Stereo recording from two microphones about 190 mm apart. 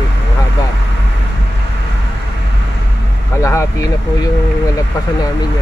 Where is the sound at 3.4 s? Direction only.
15° left (ahead or behind).